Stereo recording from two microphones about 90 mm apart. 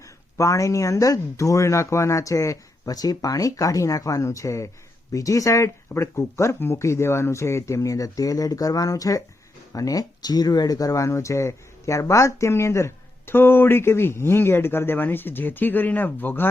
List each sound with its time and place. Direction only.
0.3 s speech: 35° left (ahead or behind)